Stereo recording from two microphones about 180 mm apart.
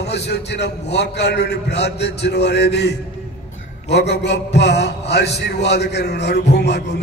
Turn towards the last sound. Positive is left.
turn(degrees=70)  # may be behind; listen again after turning